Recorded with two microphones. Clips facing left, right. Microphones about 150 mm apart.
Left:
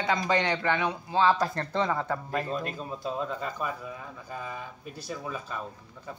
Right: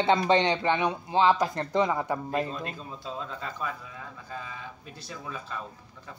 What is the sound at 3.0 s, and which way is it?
Speech, 10° left (ahead or behind).